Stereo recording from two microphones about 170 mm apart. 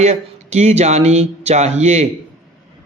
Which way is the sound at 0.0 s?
40° right (ahead or behind).